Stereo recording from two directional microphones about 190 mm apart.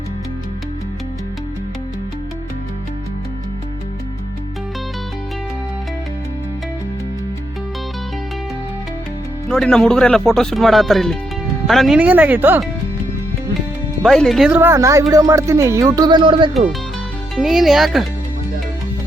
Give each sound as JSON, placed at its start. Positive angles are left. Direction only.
{"t": 9.5, "sound": "speech", "side_deg": 5}
{"t": 14.0, "sound": "speech", "side_deg": 0}
{"t": 17.3, "sound": "speech", "side_deg": 0}